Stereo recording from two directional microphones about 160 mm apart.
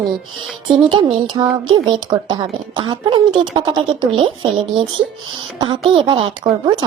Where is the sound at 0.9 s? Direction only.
30° right (ahead or behind).